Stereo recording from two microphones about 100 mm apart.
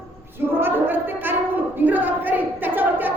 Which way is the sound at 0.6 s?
20° right (ahead or behind).